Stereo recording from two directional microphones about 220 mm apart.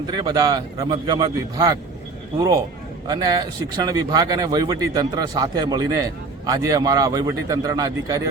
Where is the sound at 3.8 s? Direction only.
15° right (ahead or behind).